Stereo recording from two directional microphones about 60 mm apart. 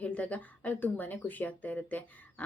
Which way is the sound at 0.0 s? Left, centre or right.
Left.